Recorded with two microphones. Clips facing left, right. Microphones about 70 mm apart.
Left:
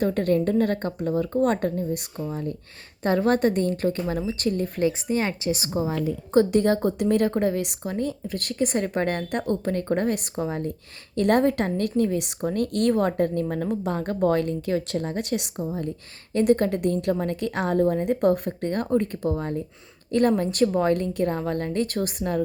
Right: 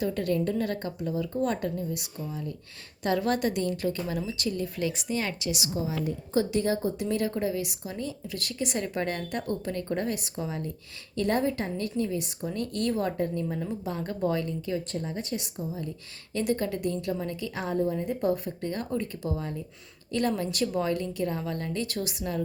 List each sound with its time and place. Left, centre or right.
0.0 s a woman's voice: left
4.9 s a woman's voice: left
5.9 s a woman's voice: left
11.2 s a woman's voice: left
16.3 s a woman's voice: left